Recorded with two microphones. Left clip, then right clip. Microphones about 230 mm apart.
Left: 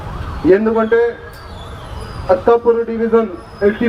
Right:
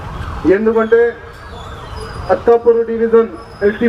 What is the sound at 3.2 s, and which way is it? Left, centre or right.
Speech, left.